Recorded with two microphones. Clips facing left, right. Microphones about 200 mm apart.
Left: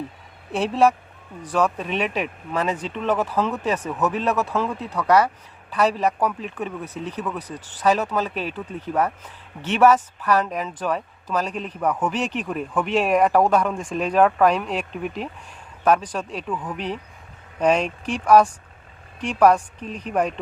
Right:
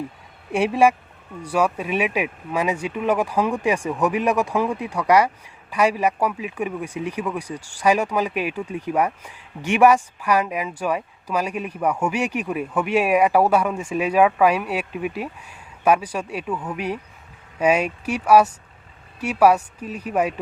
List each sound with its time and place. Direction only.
0.5 s speech: 10° right (ahead or behind)